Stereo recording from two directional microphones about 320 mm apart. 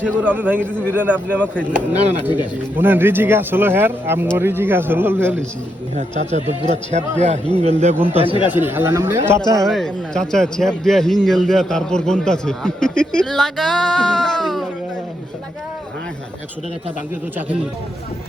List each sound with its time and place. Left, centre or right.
0.0 s a man's voice: centre
6.0 s a man's voice: right
7.9 s speech: centre
8.4 s speech: centre
8.6 s a man's voice: centre